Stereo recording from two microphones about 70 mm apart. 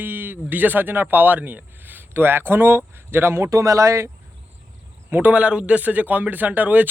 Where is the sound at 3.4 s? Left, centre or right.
Right.